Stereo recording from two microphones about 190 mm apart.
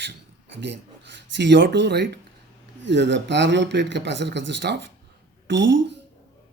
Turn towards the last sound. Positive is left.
turn(degrees=-70)  # may be behind; listen again after turning